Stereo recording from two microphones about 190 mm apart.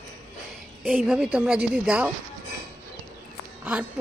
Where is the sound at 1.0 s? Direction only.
5° right (ahead or behind).